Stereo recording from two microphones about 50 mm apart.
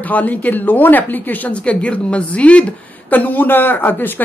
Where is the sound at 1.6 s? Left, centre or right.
Left.